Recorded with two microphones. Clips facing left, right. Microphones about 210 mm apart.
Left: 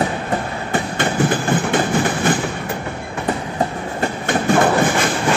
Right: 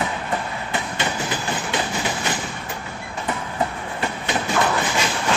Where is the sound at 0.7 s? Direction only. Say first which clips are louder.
Left 8 dB; 55° left (ahead or behind).